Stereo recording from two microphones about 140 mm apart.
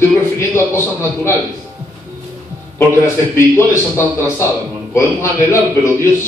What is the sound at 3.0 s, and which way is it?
Speech, 20° left (ahead or behind).